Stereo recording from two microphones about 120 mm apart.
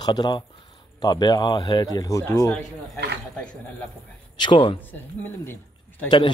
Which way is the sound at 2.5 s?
5° left (ahead or behind).